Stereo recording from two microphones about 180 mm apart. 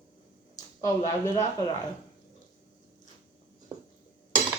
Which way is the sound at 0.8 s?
20° left (ahead or behind).